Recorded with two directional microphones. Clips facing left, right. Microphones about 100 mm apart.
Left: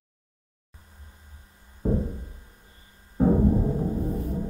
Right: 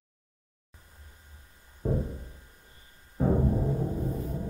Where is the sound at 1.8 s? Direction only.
25° left (ahead or behind).